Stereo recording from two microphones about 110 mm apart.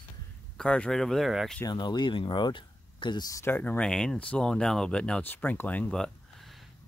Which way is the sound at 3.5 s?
15° left (ahead or behind).